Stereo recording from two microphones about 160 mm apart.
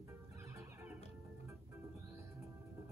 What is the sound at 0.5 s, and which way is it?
Music, 15° right (ahead or behind).